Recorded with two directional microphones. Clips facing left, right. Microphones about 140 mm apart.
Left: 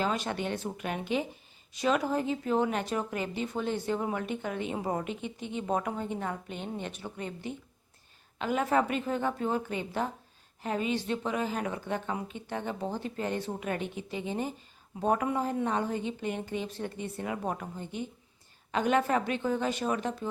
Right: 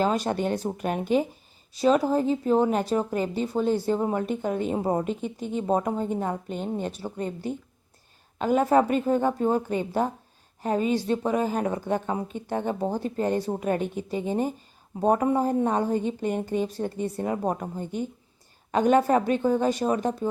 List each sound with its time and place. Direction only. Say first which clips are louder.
0.0 s speech: right 7 dB; 40° right (ahead or behind)